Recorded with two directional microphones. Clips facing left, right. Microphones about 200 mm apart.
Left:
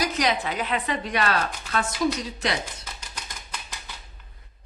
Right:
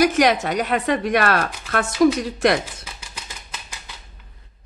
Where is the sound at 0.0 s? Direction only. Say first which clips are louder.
Right 8 dB; 50° right (ahead or behind).